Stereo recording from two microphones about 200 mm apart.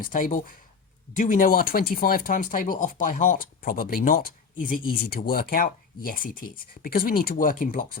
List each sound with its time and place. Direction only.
0.0 s speech: 40° left (ahead or behind)